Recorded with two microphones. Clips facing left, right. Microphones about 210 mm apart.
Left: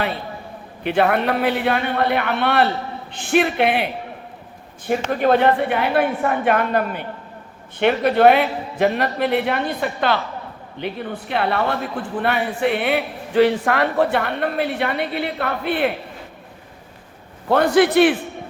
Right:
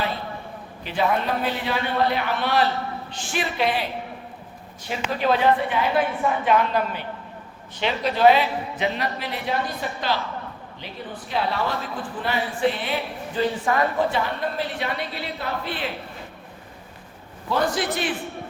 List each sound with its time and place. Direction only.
0.9 s a man's voice: 65° left (ahead or behind)
4.9 s a man's voice: 50° left (ahead or behind)
17.5 s a man's voice: 60° left (ahead or behind)